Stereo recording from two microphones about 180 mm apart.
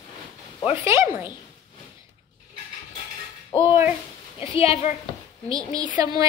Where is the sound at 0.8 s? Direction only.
15° right (ahead or behind).